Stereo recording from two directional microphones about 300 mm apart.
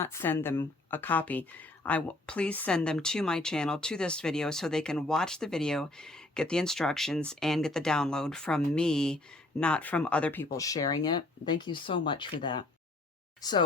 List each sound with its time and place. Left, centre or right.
0.0 s speech: centre